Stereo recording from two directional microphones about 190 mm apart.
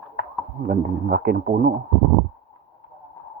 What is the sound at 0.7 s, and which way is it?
A man's voice, 50° right (ahead or behind).